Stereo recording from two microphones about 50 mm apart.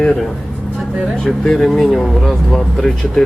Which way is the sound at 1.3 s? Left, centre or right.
Centre.